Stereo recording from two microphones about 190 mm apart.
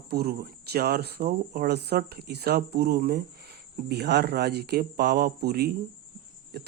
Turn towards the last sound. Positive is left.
turn(degrees=-55)  # may be behind; listen again after turning